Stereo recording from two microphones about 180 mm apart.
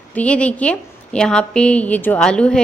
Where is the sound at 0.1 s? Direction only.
5° left (ahead or behind).